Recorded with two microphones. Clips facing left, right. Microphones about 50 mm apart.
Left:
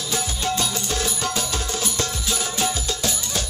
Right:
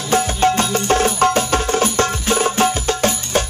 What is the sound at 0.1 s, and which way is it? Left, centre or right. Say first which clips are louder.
Music: right 11 dB; right.